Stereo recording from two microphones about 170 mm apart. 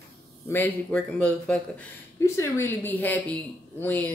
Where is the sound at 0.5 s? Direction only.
10° left (ahead or behind).